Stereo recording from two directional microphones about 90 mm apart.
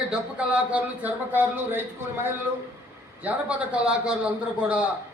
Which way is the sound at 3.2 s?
15° right (ahead or behind).